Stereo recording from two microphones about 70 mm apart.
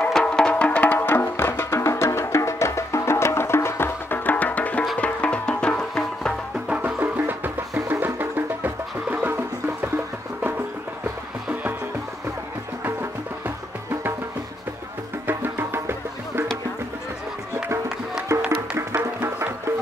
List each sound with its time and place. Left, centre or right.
0.1 s music: centre
6.7 s music: right
15.2 s music: right
18.3 s music: right